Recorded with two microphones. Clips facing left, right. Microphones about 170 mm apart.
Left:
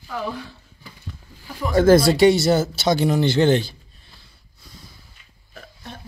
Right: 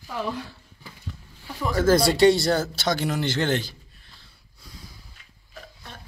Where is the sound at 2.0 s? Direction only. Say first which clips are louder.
Left 3 dB; centre (ahead or behind).